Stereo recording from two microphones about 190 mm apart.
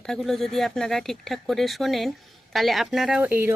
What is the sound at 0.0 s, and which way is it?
Speech, centre (ahead or behind).